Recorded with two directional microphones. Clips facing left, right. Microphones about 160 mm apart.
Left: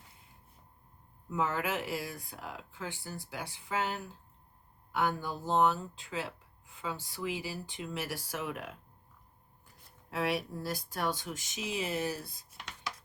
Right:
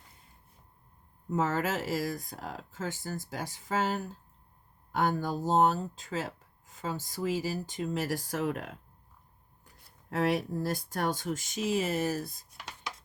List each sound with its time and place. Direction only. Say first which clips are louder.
1.3 s speech: right 3 dB; 45° right (ahead or behind)
10.1 s speech: right 4 dB; 50° right (ahead or behind)